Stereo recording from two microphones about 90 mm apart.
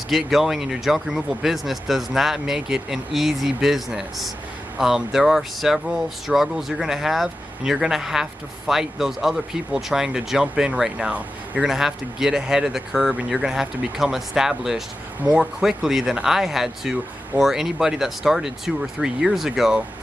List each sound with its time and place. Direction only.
0.1 s speech: centre (ahead or behind)